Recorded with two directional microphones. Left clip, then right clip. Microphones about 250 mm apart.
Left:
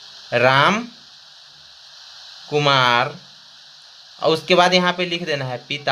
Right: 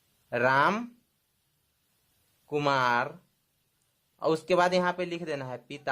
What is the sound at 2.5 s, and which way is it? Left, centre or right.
Speech, right.